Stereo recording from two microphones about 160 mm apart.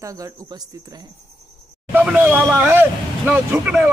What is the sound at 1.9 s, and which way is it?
Speech, 5° right (ahead or behind).